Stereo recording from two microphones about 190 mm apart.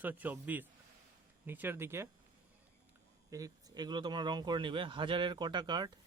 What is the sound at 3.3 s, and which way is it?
Speech, 20° right (ahead or behind).